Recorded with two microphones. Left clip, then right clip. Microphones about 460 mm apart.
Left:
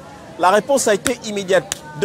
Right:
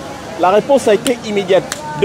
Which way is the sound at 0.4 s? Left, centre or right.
Left.